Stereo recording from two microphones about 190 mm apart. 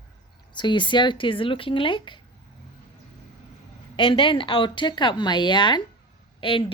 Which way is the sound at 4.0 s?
25° left (ahead or behind).